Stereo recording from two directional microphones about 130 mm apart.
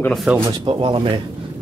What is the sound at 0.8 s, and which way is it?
Speech, 40° right (ahead or behind).